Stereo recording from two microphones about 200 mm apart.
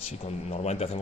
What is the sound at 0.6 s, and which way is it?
Speech, 30° left (ahead or behind).